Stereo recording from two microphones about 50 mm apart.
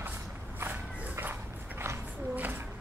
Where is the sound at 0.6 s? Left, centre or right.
Right.